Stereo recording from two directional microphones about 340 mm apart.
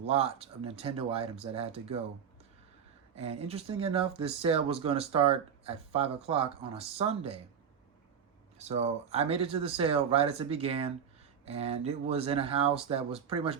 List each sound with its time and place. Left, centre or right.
0.1 s speech: centre
3.2 s speech: centre
8.5 s speech: centre